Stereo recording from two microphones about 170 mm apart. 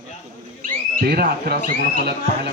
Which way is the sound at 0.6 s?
60° right (ahead or behind).